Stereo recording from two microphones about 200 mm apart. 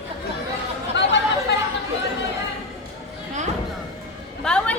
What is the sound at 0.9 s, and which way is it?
Chatter, 60° left (ahead or behind).